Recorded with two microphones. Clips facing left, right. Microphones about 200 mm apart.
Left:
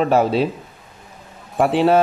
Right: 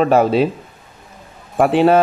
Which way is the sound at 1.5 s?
50° right (ahead or behind).